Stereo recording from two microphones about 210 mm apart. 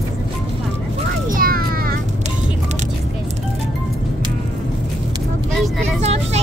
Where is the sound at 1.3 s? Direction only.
45° right (ahead or behind).